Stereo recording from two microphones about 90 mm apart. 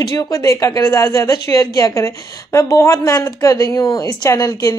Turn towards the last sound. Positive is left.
turn(degrees=40)  # may be behind; listen again after turning